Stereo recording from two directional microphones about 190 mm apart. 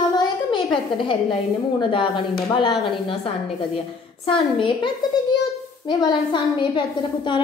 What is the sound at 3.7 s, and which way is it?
A woman's voice, 30° left (ahead or behind).